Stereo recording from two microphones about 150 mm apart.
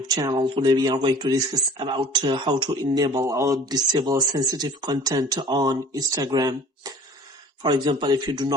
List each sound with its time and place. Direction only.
0.1 s speech: 25° right (ahead or behind)